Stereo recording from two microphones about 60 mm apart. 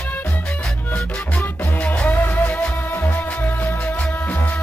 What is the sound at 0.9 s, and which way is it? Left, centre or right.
Music, left.